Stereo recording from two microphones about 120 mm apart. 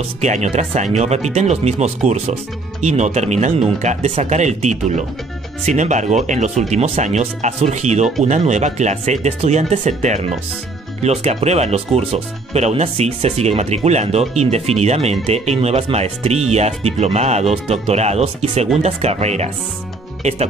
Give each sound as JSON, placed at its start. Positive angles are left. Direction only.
{"t": 0.2, "sound": "speech", "side_deg": -75}
{"t": 5.7, "sound": "speech", "side_deg": -85}